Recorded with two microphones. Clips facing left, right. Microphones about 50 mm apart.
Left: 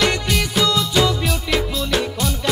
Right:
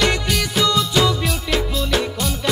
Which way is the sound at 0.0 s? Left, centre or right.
Centre.